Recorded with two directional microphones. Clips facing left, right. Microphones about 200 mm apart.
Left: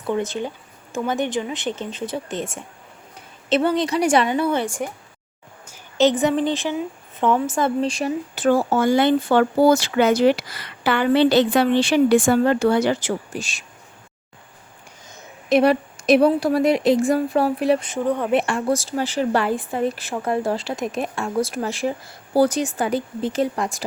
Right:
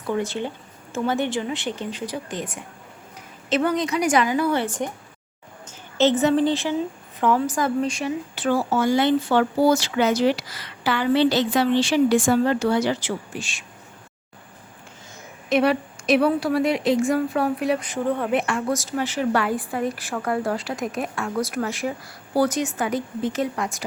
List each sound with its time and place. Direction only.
0.1 s a woman's voice: 20° left (ahead or behind); by 13.7 s 40° left (ahead or behind)
15.4 s a woman's voice: 35° left (ahead or behind)
18.0 s speech: 15° left (ahead or behind)
18.3 s a woman's voice: 30° left (ahead or behind)